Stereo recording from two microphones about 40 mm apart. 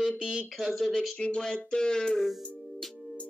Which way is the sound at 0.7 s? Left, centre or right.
Centre.